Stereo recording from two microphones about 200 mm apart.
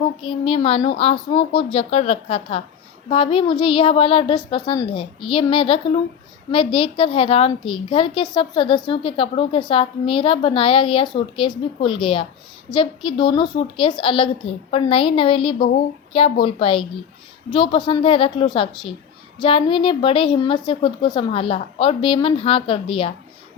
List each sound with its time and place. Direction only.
0.2 s a woman's voice: 25° left (ahead or behind)
15.5 s speech: 50° left (ahead or behind)
16.1 s a woman's voice: 25° left (ahead or behind)